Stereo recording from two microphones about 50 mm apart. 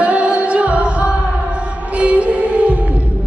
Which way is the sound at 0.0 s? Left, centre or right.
Right.